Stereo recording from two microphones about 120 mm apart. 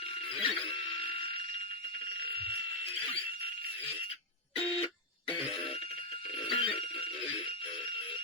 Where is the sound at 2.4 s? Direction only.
55° left (ahead or behind).